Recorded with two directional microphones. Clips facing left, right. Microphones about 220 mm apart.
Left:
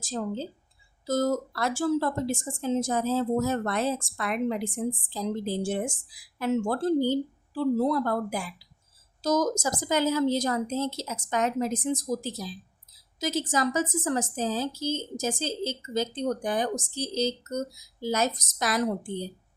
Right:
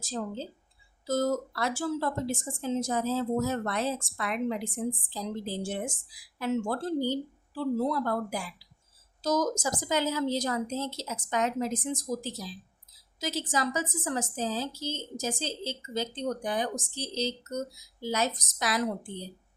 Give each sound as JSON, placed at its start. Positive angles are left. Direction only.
{"t": 0.0, "sound": "a woman's voice", "side_deg": 45}